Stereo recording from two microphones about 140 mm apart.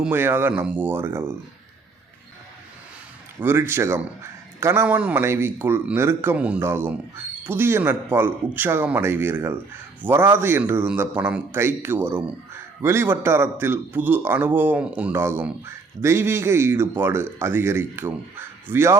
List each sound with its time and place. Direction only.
0.0 s a man's voice: 15° right (ahead or behind)
3.4 s a man's voice: 15° right (ahead or behind)